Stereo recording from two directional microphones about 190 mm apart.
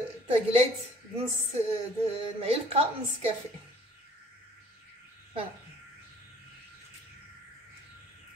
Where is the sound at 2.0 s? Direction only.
30° right (ahead or behind).